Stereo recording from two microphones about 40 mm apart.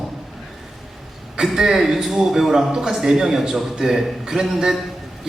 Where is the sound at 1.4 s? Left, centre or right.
Centre.